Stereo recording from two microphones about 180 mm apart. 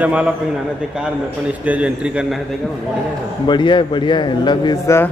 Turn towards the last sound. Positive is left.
turn(degrees=20)  # may be behind; listen again after turning